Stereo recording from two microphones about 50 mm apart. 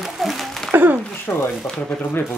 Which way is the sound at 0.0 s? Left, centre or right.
Centre.